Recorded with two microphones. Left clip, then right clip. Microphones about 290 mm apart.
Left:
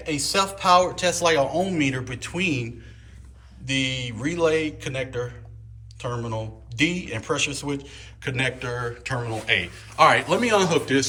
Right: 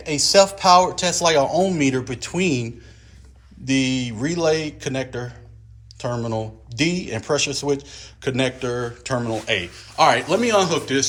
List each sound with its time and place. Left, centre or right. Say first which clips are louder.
0.0 s a man's voice: right 8 dB; right; by 11.0 s centre